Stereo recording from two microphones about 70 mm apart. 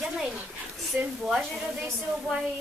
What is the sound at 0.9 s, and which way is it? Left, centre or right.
Speech, right.